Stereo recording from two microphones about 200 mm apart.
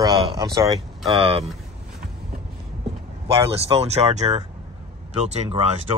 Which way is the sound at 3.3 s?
30° right (ahead or behind).